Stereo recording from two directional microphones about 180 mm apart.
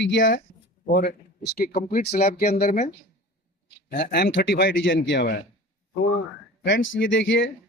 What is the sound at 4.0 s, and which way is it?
A man's voice, 65° left (ahead or behind).